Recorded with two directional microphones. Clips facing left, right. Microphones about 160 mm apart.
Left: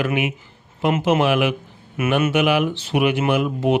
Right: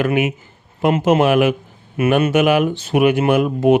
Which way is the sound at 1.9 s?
35° right (ahead or behind).